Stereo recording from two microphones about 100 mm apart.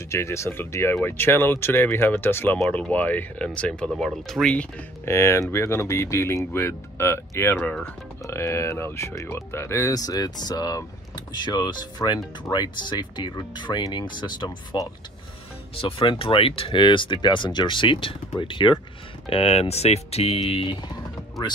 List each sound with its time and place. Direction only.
0.1 s speech: 30° left (ahead or behind); by 4.6 s 10° left (ahead or behind)
5.0 s speech: 25° left (ahead or behind)
7.5 s speech: 15° left (ahead or behind); by 14.8 s 50° left (ahead or behind)
15.8 s speech: 65° left (ahead or behind)
19.2 s speech: 75° left (ahead or behind)